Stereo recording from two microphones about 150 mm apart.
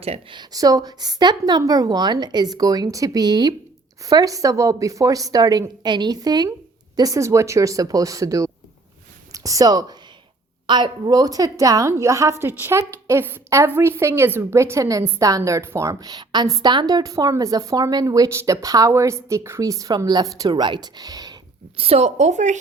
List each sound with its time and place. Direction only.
0.0 s a woman's voice: 35° right (ahead or behind)
21.8 s a woman's voice: 45° right (ahead or behind)